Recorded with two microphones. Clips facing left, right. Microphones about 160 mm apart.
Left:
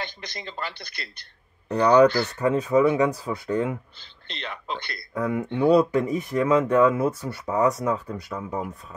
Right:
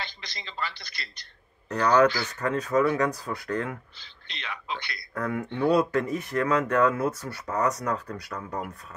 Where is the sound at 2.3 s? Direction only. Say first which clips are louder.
Left 4 dB; 10° left (ahead or behind).